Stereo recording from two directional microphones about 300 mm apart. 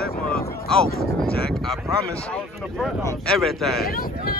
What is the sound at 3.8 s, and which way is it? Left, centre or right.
Speech, left.